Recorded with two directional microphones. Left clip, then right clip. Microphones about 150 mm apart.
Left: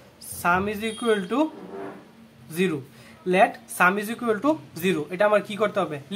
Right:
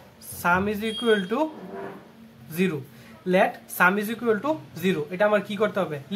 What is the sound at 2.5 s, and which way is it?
Speech, 20° left (ahead or behind).